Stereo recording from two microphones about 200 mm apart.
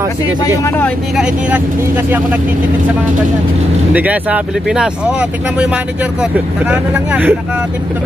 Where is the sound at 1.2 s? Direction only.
5° right (ahead or behind).